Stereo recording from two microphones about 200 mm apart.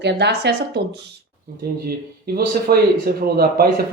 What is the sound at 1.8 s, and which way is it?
Speech, 50° right (ahead or behind).